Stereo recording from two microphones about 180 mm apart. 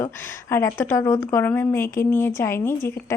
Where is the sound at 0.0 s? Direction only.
10° left (ahead or behind).